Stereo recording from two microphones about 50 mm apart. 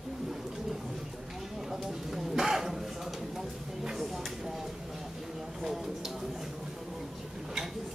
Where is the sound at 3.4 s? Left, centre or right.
Centre.